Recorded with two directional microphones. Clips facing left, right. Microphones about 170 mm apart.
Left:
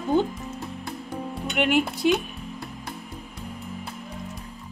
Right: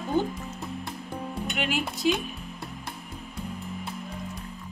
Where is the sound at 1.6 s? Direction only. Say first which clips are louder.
Left 9 dB; 60° left (ahead or behind).